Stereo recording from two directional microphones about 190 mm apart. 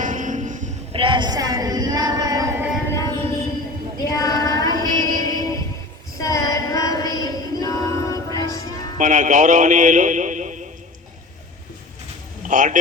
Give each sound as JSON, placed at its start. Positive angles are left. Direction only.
{"t": 0.0, "sound": "music", "side_deg": -45}
{"t": 0.9, "sound": "a sound", "side_deg": -25}
{"t": 2.9, "sound": "music", "side_deg": 20}
{"t": 4.0, "sound": "child singing", "side_deg": 20}
{"t": 6.1, "sound": "chant", "side_deg": 15}
{"t": 9.0, "sound": "a man's voice", "side_deg": -40}
{"t": 12.5, "sound": "a man's voice", "side_deg": -40}